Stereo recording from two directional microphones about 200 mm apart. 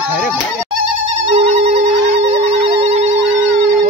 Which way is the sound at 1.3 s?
35° right (ahead or behind).